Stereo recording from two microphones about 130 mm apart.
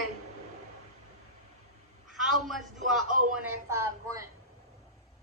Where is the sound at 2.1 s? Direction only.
Centre (ahead or behind).